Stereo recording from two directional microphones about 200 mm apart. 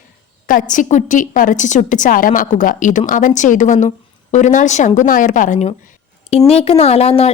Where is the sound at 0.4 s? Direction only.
40° left (ahead or behind).